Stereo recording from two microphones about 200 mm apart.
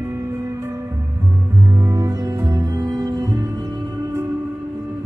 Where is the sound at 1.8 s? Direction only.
15° right (ahead or behind).